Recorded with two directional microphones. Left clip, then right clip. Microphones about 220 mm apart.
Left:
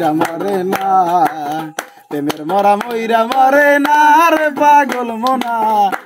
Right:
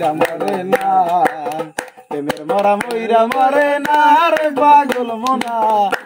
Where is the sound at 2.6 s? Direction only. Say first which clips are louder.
Left 3 dB; 45° left (ahead or behind).